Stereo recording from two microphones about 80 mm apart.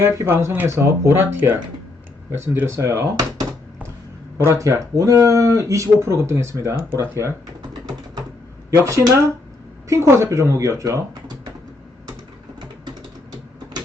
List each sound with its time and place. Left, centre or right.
0.3 s speech: right
4.4 s speech: right
8.7 s speech: right
12.5 s a sound: right